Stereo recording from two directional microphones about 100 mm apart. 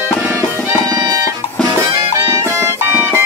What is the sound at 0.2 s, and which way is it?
Music, 20° right (ahead or behind).